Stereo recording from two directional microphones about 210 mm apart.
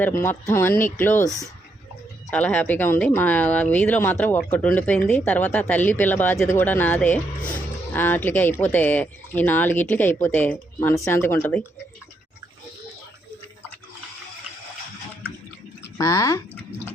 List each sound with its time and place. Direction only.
0.2 s speech: 10° left (ahead or behind)
2.3 s speech: 5° left (ahead or behind)
15.8 s speech: 15° left (ahead or behind)